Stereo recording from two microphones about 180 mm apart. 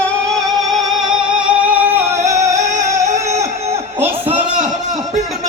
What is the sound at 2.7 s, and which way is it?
Music, 40° right (ahead or behind).